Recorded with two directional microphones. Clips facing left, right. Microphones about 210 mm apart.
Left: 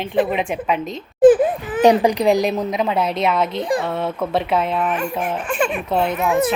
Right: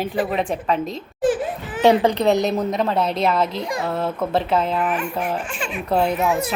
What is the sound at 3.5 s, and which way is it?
Speech, 30° left (ahead or behind).